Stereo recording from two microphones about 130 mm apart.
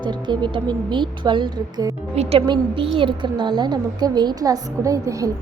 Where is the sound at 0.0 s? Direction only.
35° right (ahead or behind).